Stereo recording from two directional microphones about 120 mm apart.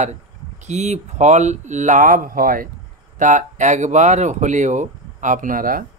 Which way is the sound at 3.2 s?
90° right.